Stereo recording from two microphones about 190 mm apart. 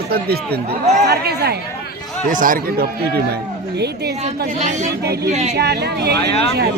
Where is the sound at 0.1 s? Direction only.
55° right (ahead or behind).